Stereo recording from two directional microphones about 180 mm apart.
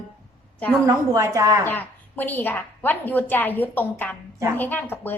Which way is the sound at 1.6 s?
10° left (ahead or behind).